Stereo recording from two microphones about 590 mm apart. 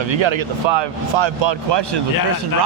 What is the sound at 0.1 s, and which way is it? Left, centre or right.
Speech, right.